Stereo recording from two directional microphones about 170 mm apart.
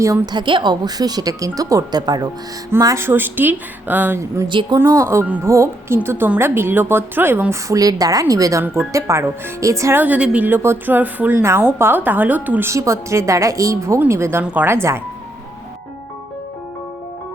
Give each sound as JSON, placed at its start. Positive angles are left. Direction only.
{"t": 0.0, "sound": "speech", "side_deg": -20}